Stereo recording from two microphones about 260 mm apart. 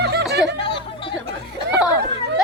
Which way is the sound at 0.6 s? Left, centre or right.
Centre.